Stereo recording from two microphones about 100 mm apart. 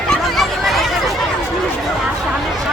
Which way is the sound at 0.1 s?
Centre (ahead or behind).